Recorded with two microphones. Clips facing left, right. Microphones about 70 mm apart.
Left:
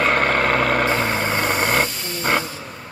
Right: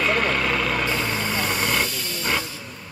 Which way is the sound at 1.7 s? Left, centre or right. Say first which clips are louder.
Left 4 dB; left.